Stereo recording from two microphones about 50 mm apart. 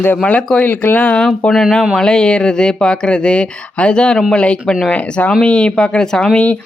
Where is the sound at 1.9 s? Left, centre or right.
Centre.